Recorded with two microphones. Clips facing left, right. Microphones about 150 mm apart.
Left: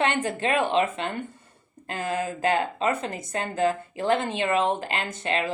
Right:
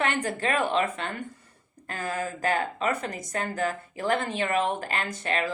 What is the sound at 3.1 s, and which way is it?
Speech, 55° left (ahead or behind).